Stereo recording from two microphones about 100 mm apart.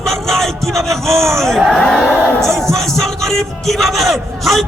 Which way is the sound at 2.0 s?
10° right (ahead or behind).